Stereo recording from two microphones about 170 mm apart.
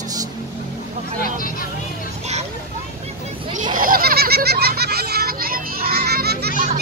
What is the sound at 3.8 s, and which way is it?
Children playing, 60° right (ahead or behind).